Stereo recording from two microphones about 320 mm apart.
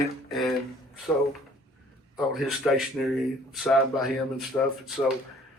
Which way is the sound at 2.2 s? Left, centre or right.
Centre.